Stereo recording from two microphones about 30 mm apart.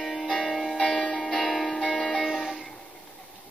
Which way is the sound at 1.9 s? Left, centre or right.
Centre.